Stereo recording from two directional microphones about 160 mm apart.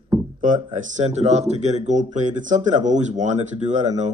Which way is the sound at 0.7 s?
45° right (ahead or behind).